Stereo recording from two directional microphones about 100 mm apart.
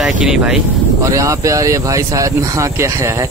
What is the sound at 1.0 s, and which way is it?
Speech, 30° right (ahead or behind).